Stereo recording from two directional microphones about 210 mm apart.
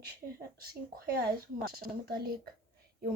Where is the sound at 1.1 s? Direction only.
45° right (ahead or behind).